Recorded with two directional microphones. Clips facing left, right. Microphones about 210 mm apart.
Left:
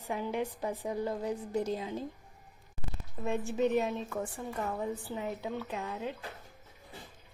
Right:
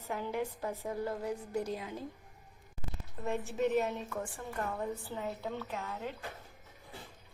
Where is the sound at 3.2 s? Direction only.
15° left (ahead or behind).